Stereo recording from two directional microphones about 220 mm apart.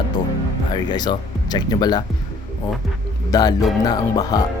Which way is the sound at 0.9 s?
20° left (ahead or behind).